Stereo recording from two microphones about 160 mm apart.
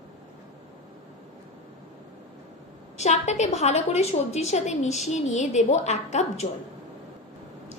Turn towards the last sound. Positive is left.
turn(degrees=45)  # may be behind; listen again after turning